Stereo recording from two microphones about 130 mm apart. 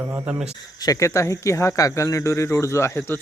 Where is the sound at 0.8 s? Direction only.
25° left (ahead or behind).